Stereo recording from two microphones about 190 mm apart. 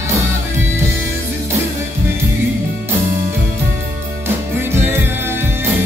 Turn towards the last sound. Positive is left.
turn(degrees=-10)  # may be behind; listen again after turning